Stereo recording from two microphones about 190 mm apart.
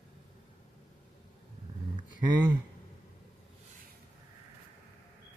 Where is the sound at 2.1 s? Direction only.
25° right (ahead or behind).